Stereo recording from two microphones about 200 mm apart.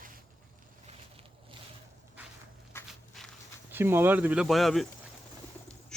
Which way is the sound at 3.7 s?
10° right (ahead or behind).